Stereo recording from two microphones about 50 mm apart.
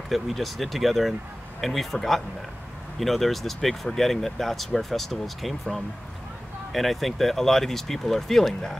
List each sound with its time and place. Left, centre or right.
0.1 s speech: centre